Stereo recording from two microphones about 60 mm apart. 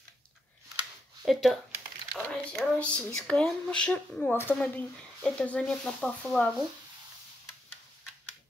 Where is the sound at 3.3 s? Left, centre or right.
Centre.